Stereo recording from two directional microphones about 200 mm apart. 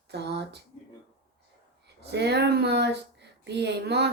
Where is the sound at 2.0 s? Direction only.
55° right (ahead or behind).